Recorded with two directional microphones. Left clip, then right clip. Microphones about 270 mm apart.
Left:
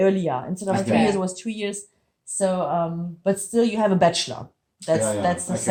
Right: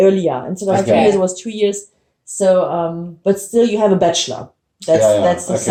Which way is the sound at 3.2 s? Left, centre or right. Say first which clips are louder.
Right 7 dB; left.